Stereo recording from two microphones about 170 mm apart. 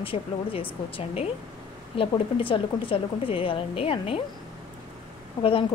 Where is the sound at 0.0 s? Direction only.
30° left (ahead or behind).